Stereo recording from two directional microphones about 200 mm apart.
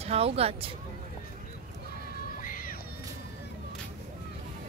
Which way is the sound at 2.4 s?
45° left (ahead or behind).